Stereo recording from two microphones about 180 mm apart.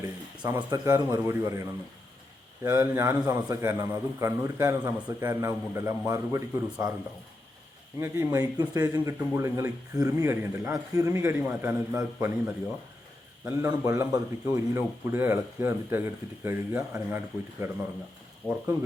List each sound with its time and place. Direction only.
0.4 s speech: 15° right (ahead or behind)
7.9 s speech: 15° right (ahead or behind)
18.4 s speech: 5° left (ahead or behind)